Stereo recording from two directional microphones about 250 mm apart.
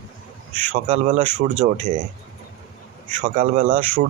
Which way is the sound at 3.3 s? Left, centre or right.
Right.